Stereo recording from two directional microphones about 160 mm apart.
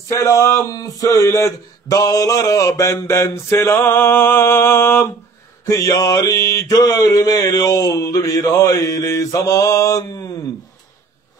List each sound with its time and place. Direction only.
0.1 s speech: 20° left (ahead or behind)